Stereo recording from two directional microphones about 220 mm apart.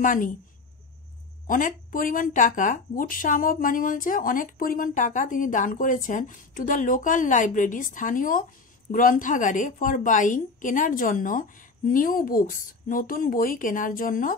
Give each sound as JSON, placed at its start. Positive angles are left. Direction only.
{"t": 0.0, "sound": "speech", "side_deg": 35}
{"t": 1.5, "sound": "speech", "side_deg": 40}